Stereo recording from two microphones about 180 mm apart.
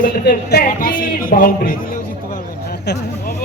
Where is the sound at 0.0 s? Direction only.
55° left (ahead or behind).